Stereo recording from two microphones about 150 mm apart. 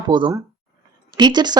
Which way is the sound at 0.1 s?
30° right (ahead or behind).